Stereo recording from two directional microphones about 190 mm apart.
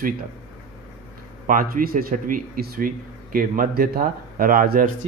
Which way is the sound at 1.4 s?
50° right (ahead or behind).